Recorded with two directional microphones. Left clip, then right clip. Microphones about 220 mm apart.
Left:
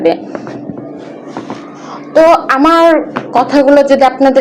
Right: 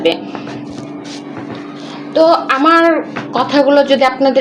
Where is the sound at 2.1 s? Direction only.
20° left (ahead or behind).